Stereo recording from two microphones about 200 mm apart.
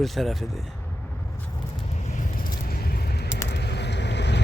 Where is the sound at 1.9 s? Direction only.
35° left (ahead or behind); by 3.3 s 55° left (ahead or behind).